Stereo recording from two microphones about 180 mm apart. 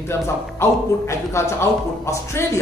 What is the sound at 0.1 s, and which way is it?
A man's voice, 15° left (ahead or behind).